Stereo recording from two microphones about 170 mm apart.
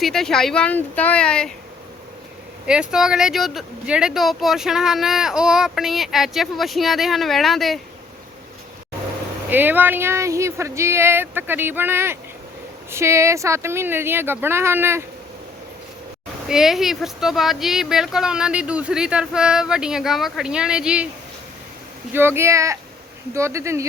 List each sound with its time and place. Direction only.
0.0 s speech: centre (ahead or behind)
2.6 s speech: 5° right (ahead or behind)
9.5 s speech: 10° right (ahead or behind)
16.5 s speech: 5° right (ahead or behind)
22.1 s speech: 15° right (ahead or behind)